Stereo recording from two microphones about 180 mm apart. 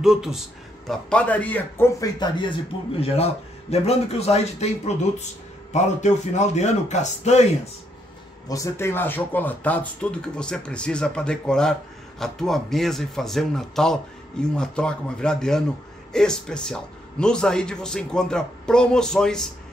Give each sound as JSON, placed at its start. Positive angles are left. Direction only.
{"t": 0.0, "sound": "a man's voice", "side_deg": -5}
{"t": 2.1, "sound": "a man's voice", "side_deg": 25}
{"t": 8.5, "sound": "a man's voice", "side_deg": 15}